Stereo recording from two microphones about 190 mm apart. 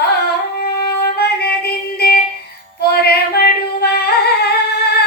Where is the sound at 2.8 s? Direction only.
55° left (ahead or behind).